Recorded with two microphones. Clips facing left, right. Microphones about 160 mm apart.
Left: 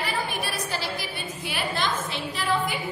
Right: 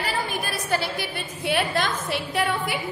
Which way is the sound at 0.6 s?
55° right (ahead or behind).